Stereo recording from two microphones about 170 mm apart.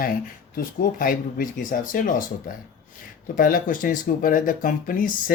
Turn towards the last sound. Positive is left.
turn(degrees=55)  # may be behind; listen again after turning